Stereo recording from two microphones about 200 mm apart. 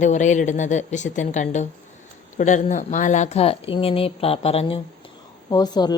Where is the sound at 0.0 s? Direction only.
35° left (ahead or behind).